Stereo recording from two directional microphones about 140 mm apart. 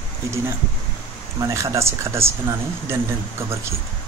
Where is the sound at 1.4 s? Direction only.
20° right (ahead or behind).